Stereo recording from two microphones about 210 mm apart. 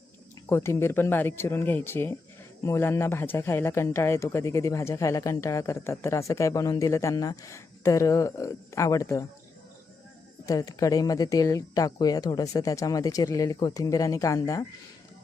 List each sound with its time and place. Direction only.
0.4 s speech: 15° left (ahead or behind)
10.4 s speech: 15° left (ahead or behind)